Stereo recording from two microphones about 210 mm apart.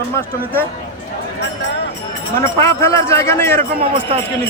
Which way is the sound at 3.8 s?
25° right (ahead or behind).